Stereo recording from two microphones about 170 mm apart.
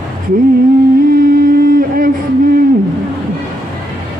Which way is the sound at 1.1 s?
60° right (ahead or behind).